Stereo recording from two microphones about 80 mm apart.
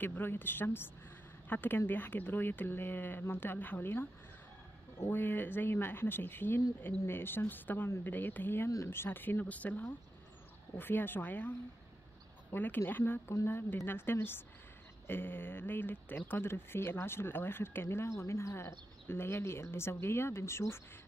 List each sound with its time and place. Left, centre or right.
0.0 s speech: left
5.1 s speech: left
8.6 s speech: left